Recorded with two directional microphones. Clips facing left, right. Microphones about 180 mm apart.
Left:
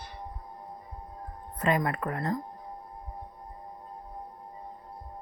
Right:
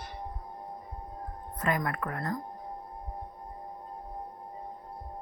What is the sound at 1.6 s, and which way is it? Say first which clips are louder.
Speech: left 3 dB; 25° left (ahead or behind).